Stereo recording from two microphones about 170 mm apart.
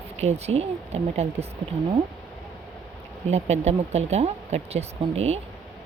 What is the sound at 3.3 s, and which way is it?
Speech, 40° right (ahead or behind).